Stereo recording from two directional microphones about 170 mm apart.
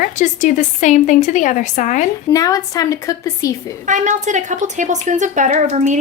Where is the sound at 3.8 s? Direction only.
45° right (ahead or behind).